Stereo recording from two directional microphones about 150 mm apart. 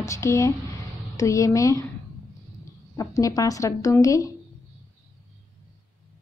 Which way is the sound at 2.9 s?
25° left (ahead or behind).